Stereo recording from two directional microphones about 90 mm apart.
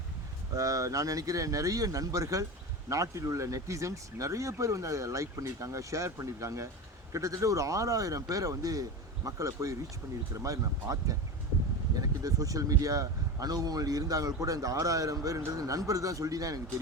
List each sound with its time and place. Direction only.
0.5 s speech: 40° right (ahead or behind)